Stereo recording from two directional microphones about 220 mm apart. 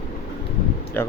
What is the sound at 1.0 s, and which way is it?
Speech, 10° left (ahead or behind).